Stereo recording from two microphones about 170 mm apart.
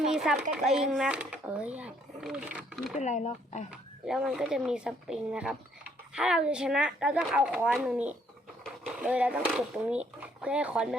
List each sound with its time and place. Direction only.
0.0 s a sound: 5° right (ahead or behind)
0.5 s speech: 5° right (ahead or behind)
3.0 s speech: 45° left (ahead or behind)
3.7 s speech: 5° right (ahead or behind)